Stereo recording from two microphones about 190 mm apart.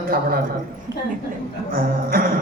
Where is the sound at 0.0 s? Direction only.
50° right (ahead or behind).